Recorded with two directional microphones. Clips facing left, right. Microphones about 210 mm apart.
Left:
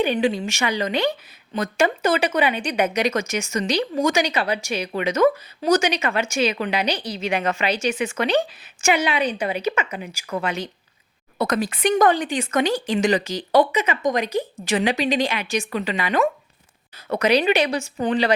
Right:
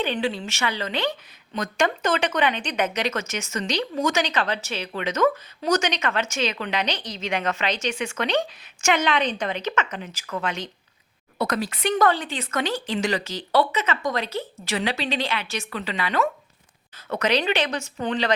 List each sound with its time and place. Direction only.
0.0 s speech: 15° left (ahead or behind)